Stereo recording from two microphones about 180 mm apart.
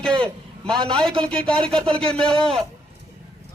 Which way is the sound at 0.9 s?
5° left (ahead or behind).